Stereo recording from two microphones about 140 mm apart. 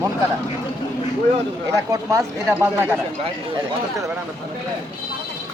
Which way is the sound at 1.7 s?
25° right (ahead or behind).